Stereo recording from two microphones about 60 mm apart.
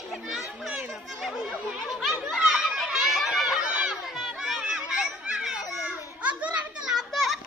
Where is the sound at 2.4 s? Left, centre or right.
Centre.